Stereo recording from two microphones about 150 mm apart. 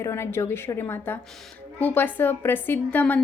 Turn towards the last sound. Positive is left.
turn(degrees=10)  # may be behind; listen again after turning